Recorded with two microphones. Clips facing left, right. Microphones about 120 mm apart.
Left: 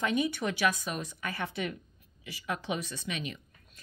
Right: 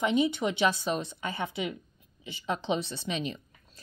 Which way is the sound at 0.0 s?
20° right (ahead or behind).